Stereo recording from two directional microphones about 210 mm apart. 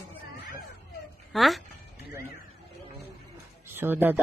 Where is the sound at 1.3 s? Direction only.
Centre (ahead or behind).